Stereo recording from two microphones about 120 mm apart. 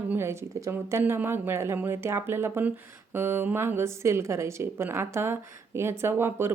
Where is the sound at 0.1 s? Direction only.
20° right (ahead or behind).